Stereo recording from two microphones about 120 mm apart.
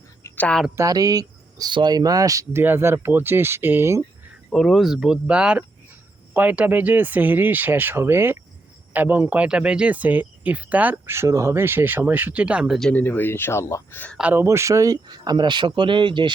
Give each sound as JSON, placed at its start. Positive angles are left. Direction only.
{"t": 0.3, "sound": "speech", "side_deg": 10}
{"t": 0.8, "sound": "speech", "side_deg": -30}
{"t": 4.4, "sound": "speech", "side_deg": 0}
{"t": 12.9, "sound": "speech", "side_deg": 15}
{"t": 14.2, "sound": "speech", "side_deg": -10}
{"t": 14.4, "sound": "speech", "side_deg": -25}